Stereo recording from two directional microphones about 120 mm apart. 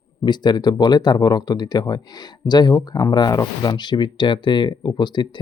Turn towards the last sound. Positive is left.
turn(degrees=40)  # may be behind; listen again after turning